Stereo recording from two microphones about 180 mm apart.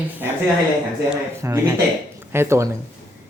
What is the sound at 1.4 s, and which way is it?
Speech, 15° right (ahead or behind).